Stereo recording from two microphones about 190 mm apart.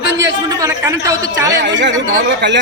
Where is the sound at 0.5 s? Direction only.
15° right (ahead or behind).